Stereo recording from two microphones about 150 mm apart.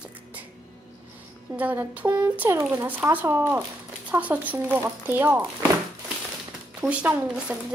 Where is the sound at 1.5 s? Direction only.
10° right (ahead or behind).